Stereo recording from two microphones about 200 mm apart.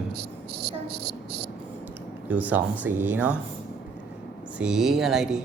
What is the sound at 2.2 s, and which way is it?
Speech, 10° right (ahead or behind).